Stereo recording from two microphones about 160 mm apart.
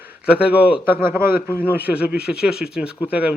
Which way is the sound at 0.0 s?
5° right (ahead or behind).